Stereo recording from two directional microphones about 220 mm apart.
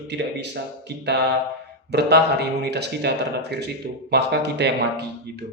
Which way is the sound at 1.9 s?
50° right (ahead or behind).